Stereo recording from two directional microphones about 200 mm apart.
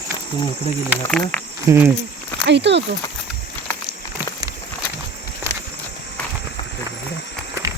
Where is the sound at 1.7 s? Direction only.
15° right (ahead or behind).